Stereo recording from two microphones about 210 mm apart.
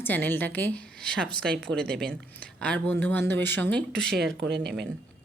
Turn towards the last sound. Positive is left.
turn(degrees=-50)  # may be behind; listen again after turning